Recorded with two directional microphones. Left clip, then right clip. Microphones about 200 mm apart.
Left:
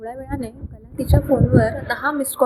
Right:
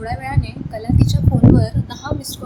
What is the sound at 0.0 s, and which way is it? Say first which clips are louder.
A woman's voice: right 4 dB; 10° left (ahead or behind).